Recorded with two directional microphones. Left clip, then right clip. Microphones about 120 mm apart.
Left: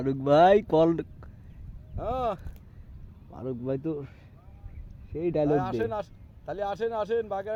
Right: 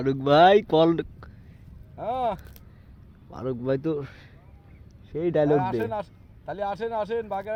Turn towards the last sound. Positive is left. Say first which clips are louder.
# even
turn(degrees=35)  # may be behind; listen again after turning